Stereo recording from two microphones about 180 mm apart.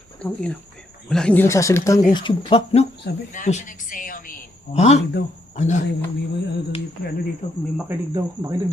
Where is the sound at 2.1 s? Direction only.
30° left (ahead or behind).